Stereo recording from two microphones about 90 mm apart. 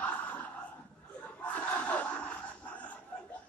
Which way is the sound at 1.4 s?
15° left (ahead or behind).